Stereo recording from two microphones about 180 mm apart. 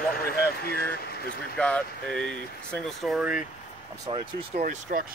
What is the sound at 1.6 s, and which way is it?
Speech, 5° left (ahead or behind).